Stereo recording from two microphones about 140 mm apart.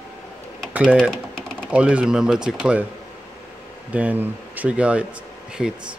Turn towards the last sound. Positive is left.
turn(degrees=-5)  # may be behind; listen again after turning